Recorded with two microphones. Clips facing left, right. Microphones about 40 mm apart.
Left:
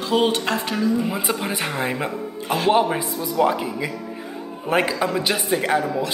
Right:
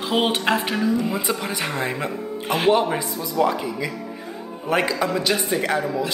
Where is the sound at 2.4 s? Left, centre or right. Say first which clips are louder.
Even; right.